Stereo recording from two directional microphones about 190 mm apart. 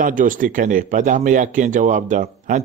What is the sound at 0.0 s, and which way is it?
A man's voice, 45° right (ahead or behind).